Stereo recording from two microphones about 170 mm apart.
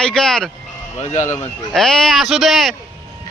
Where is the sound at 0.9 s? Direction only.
45° left (ahead or behind).